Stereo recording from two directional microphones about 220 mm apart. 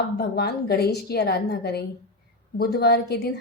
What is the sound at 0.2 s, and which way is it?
Speech, 45° left (ahead or behind).